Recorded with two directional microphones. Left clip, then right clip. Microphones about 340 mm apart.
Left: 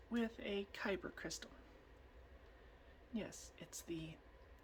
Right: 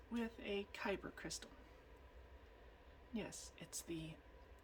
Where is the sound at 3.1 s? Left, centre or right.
Centre.